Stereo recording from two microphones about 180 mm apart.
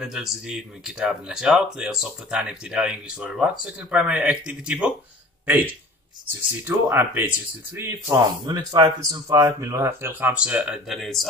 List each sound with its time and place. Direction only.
0.0 s speech: centre (ahead or behind)
6.6 s speech: 10° right (ahead or behind)
8.5 s speech: 25° right (ahead or behind); by 11.2 s centre (ahead or behind)